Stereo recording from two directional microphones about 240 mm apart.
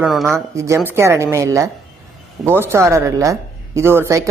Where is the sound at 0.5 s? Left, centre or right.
Centre.